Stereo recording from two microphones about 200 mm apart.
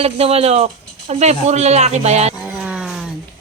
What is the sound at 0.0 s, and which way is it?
Speech, 30° right (ahead or behind).